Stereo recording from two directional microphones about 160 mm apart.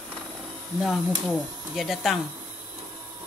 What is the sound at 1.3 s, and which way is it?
Speech, centre (ahead or behind).